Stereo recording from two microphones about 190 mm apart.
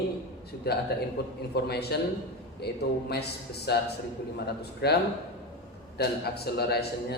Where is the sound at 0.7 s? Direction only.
55° left (ahead or behind).